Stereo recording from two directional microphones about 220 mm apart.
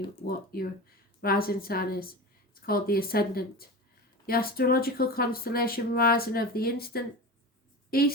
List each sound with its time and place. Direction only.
0.3 s a woman's voice: 45° left (ahead or behind)